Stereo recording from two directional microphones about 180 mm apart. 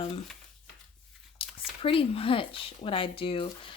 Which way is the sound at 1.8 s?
30° left (ahead or behind).